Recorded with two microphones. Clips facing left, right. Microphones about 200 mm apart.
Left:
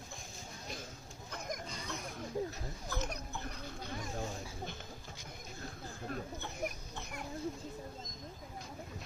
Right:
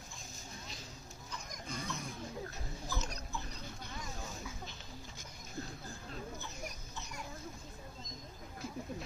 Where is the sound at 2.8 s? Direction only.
55° left (ahead or behind).